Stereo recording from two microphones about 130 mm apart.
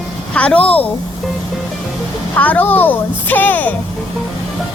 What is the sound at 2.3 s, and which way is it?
Speech, 10° left (ahead or behind).